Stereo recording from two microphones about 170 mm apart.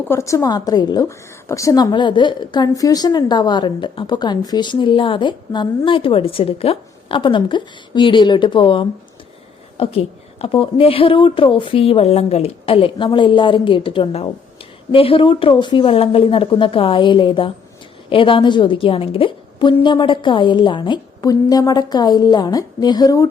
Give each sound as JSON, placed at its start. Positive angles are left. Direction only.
{"t": 0.1, "sound": "a woman's voice", "side_deg": 15}